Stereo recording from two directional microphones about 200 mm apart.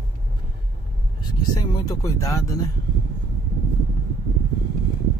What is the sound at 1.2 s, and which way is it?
Speech, 20° left (ahead or behind).